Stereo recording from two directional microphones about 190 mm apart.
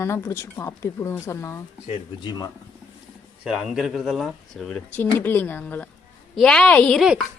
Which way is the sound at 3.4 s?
5° right (ahead or behind).